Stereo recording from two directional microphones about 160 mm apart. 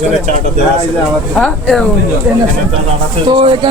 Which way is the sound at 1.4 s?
5° left (ahead or behind).